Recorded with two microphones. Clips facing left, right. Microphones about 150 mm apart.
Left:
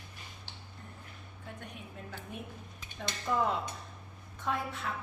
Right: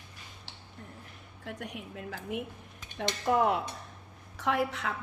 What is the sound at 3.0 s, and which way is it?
Cutlery, 65° right (ahead or behind).